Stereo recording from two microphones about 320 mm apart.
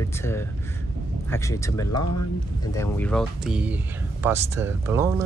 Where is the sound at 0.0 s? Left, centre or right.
Centre.